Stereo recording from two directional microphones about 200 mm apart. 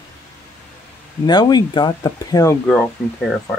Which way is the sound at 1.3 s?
20° left (ahead or behind).